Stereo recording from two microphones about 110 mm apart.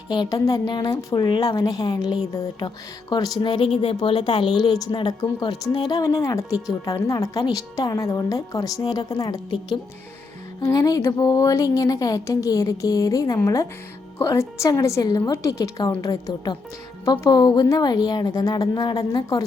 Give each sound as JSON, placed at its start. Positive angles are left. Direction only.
{"t": 0.1, "sound": "a woman's voice", "side_deg": 40}
{"t": 10.6, "sound": "a woman's voice", "side_deg": 30}